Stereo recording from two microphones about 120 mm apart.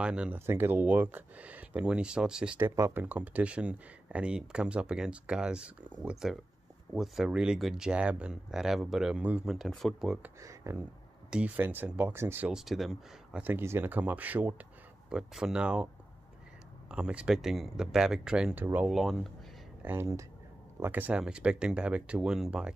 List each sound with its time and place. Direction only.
0.0 s speech: 10° right (ahead or behind)
9.5 s speech: centre (ahead or behind)
10.4 s speech: 25° right (ahead or behind)
11.2 s speech: 10° right (ahead or behind)
12.4 s speech: 5° right (ahead or behind)
13.4 s speech: 20° right (ahead or behind)
16.9 s speech: 10° right (ahead or behind)
18.9 s speech: centre (ahead or behind)
19.8 s speech: 20° right (ahead or behind)